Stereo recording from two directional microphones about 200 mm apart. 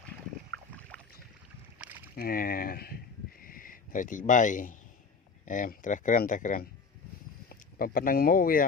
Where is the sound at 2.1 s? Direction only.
45° left (ahead or behind).